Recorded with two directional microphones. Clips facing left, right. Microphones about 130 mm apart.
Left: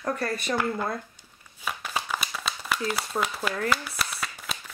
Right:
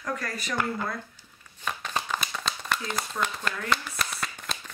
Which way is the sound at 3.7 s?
5° left (ahead or behind).